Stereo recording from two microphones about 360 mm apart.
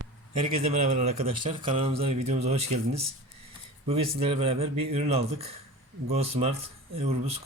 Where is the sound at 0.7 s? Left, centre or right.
Centre.